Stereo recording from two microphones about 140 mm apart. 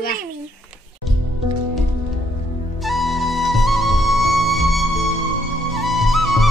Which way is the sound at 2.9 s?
Centre (ahead or behind).